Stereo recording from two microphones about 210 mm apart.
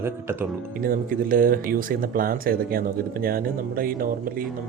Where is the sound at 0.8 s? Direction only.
40° right (ahead or behind).